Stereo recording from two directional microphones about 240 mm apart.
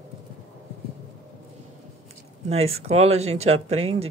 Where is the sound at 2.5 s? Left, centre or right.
Right.